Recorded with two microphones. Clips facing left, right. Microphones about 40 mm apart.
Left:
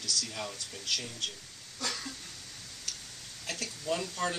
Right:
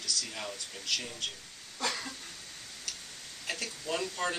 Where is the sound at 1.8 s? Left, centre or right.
Centre.